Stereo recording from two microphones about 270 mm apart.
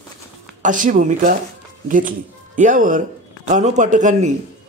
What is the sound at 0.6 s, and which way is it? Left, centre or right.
A man's voice, right.